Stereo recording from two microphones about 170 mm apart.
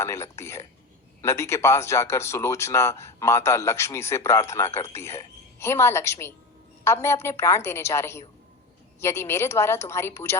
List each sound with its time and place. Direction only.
0.0 s speech: 15° left (ahead or behind)